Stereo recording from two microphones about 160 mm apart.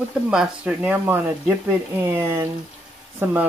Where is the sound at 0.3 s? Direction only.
5° right (ahead or behind).